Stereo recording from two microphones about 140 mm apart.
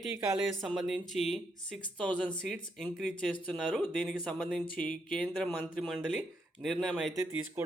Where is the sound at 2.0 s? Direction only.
10° left (ahead or behind).